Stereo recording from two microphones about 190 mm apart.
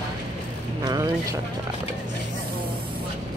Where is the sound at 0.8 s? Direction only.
20° right (ahead or behind).